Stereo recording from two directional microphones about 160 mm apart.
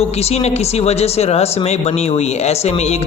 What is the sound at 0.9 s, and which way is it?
Speech, 40° left (ahead or behind).